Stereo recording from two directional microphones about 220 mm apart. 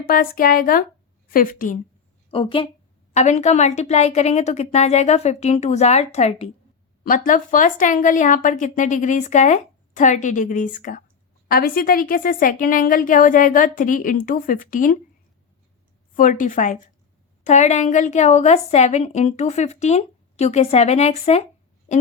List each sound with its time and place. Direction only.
0.1 s a woman's voice: 40° left (ahead or behind)
2.3 s a woman's voice: 25° left (ahead or behind)
16.1 s a woman's voice: 35° left (ahead or behind)